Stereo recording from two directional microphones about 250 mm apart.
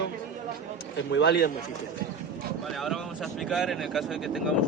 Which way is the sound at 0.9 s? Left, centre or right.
Left.